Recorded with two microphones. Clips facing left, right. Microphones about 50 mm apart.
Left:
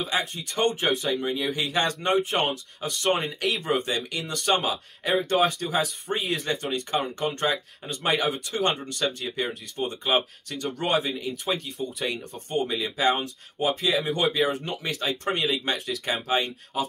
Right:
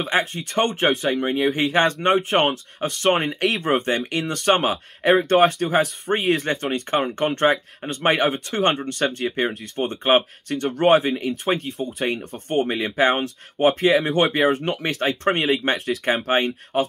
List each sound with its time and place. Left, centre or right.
0.0 s speech: right
14.0 s speech: right